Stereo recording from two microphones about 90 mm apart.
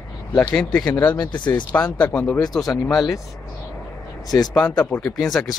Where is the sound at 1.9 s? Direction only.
15° left (ahead or behind).